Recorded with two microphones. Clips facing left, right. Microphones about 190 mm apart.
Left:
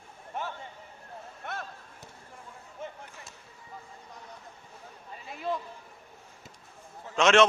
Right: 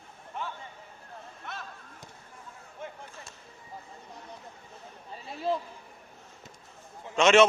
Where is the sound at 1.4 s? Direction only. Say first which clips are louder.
Left 4 dB; 55° left (ahead or behind).